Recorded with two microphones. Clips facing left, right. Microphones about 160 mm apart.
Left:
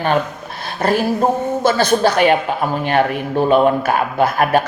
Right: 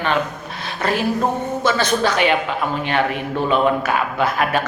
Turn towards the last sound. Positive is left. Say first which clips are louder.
# left 4 dB
turn(degrees=45)  # may be behind; listen again after turning